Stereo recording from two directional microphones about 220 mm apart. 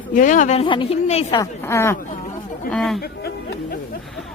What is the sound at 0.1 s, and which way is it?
A woman's voice, 35° left (ahead or behind).